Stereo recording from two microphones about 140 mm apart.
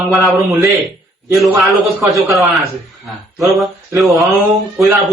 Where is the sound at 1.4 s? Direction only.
Centre (ahead or behind).